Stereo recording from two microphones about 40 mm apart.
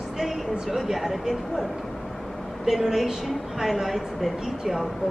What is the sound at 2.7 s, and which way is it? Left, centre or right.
A woman's voice, centre.